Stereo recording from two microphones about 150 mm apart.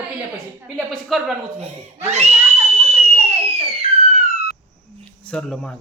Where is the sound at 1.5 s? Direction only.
45° right (ahead or behind).